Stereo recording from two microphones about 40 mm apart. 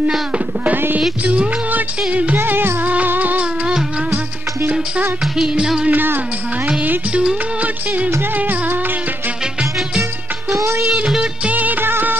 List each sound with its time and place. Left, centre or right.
2.0 s music: right
2.3 s music: right
3.1 s music: right
5.9 s music: right
7.6 s music: right
8.4 s music: right
11.5 s music of bollywood: right
11.8 s music: right